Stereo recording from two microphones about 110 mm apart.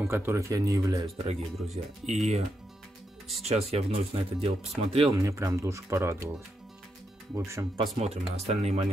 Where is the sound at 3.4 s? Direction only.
70° right (ahead or behind).